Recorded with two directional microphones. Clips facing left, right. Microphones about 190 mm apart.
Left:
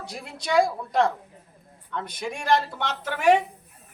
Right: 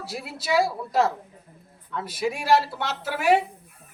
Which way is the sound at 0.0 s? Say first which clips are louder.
Right 2 dB; 5° right (ahead or behind).